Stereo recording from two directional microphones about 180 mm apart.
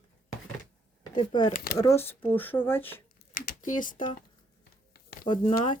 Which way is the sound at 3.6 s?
45° left (ahead or behind).